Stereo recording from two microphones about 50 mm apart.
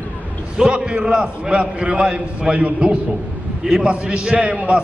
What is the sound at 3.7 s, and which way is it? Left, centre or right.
A man's voice, centre.